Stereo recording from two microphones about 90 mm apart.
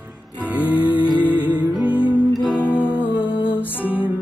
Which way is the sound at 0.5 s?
15° right (ahead or behind).